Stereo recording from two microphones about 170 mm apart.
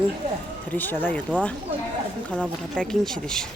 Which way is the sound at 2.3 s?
5° left (ahead or behind).